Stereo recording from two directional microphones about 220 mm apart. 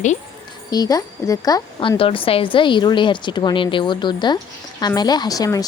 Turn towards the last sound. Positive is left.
turn(degrees=15)  # may be behind; listen again after turning